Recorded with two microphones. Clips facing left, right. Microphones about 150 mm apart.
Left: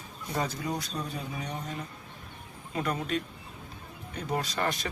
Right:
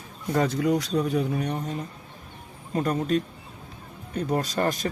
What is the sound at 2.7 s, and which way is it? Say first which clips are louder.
Speech: right 7 dB; 40° right (ahead or behind).